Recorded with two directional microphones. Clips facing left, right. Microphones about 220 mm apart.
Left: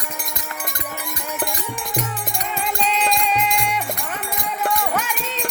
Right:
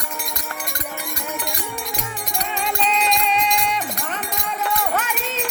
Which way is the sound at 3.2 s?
5° left (ahead or behind).